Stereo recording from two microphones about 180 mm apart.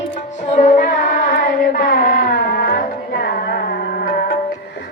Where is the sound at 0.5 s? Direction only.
40° left (ahead or behind).